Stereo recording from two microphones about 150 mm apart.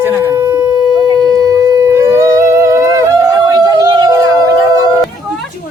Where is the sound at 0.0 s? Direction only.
15° right (ahead or behind).